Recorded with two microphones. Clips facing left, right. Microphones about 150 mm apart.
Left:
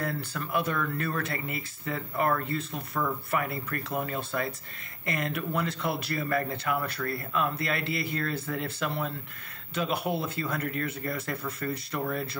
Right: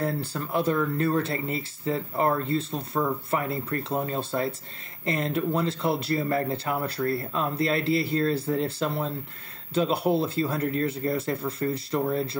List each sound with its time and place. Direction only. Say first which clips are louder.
0.0 s speech: right 4 dB; 30° right (ahead or behind)